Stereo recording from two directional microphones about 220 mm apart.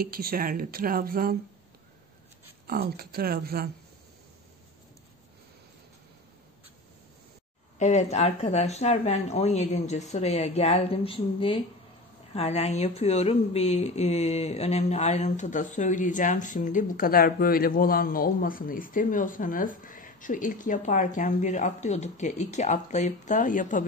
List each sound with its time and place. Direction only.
0.0 s speech: 40° right (ahead or behind)
2.6 s speech: 45° right (ahead or behind)
7.8 s speech: 30° left (ahead or behind)